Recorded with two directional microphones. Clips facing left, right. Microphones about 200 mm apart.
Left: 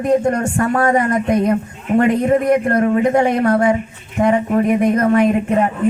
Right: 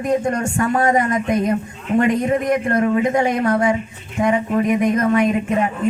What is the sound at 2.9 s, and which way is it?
Speech, 50° left (ahead or behind).